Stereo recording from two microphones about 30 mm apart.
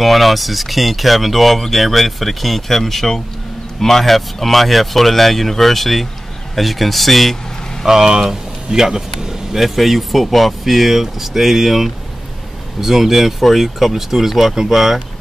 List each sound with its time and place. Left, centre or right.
0.0 s speech: centre
7.8 s speech: centre
9.6 s speech: centre